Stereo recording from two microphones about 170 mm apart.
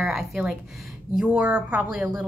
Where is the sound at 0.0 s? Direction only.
5° right (ahead or behind).